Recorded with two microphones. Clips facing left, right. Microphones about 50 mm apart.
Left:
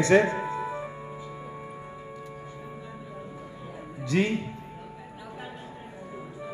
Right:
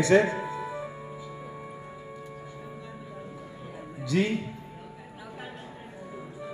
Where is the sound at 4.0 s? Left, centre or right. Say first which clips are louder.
Left 1 dB; left.